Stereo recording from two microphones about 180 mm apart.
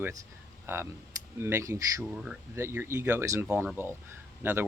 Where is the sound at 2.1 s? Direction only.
5° right (ahead or behind).